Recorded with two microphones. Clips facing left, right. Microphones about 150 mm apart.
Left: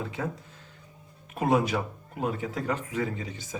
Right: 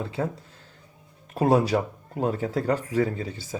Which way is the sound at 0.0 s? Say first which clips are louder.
Right 4 dB; 30° right (ahead or behind).